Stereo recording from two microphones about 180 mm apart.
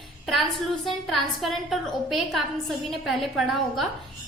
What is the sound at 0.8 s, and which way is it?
A woman's voice, centre (ahead or behind).